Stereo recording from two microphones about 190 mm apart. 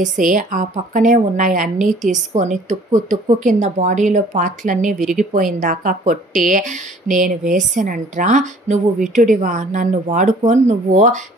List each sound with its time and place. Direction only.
0.2 s a woman's voice: 45° right (ahead or behind)